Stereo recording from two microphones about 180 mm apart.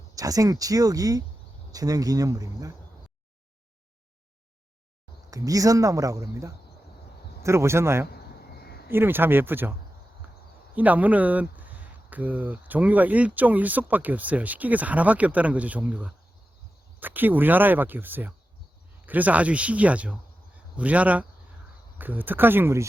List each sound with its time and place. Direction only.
0.2 s speech: 20° right (ahead or behind)
5.3 s speech: 20° right (ahead or behind)
10.8 s speech: 10° right (ahead or behind)